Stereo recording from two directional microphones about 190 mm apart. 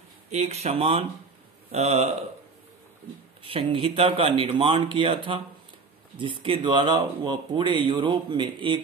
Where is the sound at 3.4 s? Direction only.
30° right (ahead or behind).